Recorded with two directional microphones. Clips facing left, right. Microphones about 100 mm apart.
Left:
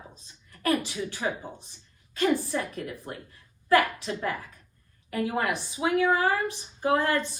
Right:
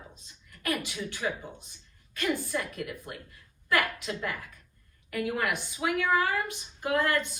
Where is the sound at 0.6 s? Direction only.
35° left (ahead or behind).